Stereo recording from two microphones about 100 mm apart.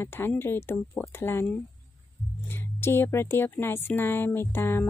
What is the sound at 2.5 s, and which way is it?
A woman's voice, 25° left (ahead or behind).